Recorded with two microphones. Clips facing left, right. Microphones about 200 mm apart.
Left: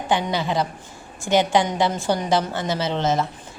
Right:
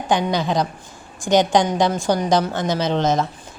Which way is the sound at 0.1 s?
15° right (ahead or behind).